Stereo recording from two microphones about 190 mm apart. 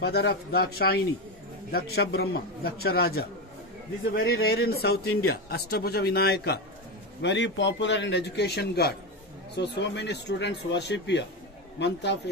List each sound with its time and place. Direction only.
0.0 s a man's voice: 60° left (ahead or behind)
7.2 s a man's voice: 70° left (ahead or behind)